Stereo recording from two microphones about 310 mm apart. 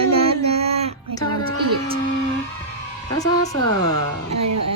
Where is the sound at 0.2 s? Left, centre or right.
Centre.